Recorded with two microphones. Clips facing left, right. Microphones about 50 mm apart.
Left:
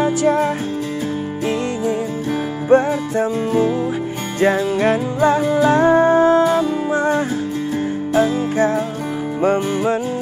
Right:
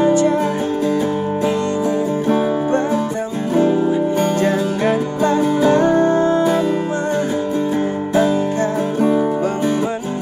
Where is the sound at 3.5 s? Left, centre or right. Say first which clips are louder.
Right 5 dB; right.